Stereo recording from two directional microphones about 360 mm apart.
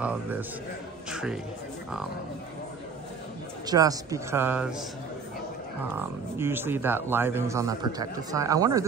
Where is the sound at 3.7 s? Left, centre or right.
Centre.